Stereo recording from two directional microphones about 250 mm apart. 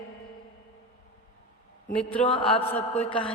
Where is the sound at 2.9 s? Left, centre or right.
Left.